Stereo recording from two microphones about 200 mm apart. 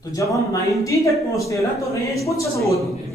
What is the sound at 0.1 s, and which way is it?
Speech, 15° left (ahead or behind).